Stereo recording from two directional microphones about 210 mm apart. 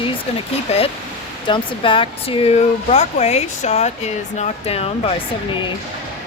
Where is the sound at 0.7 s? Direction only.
30° left (ahead or behind).